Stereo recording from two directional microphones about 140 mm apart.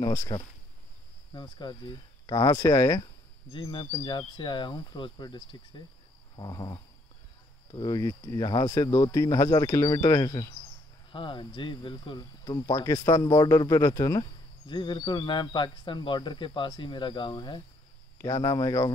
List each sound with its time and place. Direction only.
0.0 s speech: 25° left (ahead or behind)
3.5 s speech: 35° left (ahead or behind)
11.1 s speech: 35° left (ahead or behind)
14.7 s speech: 35° left (ahead or behind)